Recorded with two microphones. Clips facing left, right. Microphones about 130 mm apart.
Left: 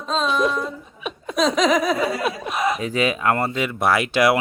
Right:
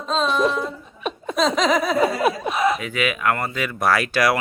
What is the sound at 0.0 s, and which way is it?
Laughter, centre (ahead or behind).